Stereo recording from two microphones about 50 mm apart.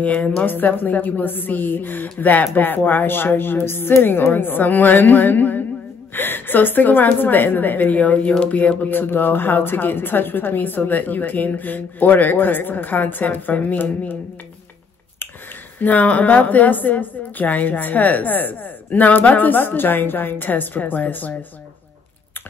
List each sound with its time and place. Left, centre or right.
0.0 s a woman's voice: left
0.5 s a woman's voice: left
15.8 s a woman's voice: left